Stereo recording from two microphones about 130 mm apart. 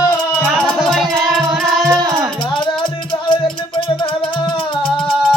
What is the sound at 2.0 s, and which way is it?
Music, 30° right (ahead or behind).